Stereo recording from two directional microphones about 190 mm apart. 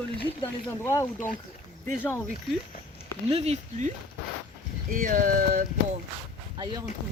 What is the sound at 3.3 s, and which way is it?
Speech, 35° right (ahead or behind).